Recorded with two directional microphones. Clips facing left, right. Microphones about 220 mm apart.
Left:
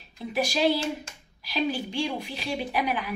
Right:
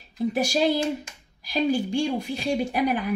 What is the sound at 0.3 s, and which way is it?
Speech, 45° right (ahead or behind).